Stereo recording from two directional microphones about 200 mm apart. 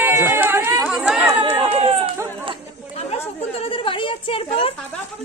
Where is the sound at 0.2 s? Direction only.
10° right (ahead or behind).